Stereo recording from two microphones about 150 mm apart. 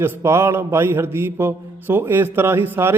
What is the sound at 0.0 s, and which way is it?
A man's voice, 15° right (ahead or behind).